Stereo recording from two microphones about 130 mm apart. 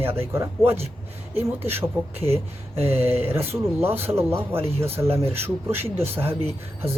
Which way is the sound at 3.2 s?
15° right (ahead or behind).